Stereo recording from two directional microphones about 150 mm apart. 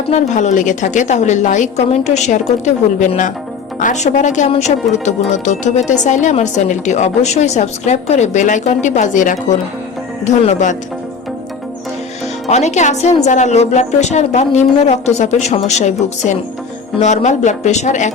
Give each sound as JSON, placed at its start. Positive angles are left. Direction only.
{"t": 0.1, "sound": "speech", "side_deg": 50}
{"t": 12.5, "sound": "speech", "side_deg": 50}